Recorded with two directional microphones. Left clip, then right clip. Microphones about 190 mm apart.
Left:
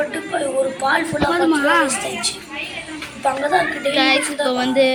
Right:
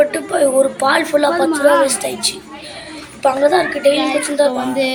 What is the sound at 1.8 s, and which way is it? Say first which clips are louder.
Speech: right 3 dB; 20° right (ahead or behind).